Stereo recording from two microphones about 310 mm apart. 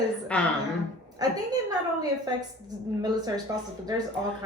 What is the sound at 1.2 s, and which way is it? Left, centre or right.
Speech, centre.